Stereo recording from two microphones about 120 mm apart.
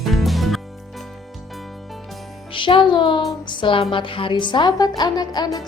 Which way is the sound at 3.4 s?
45° left (ahead or behind).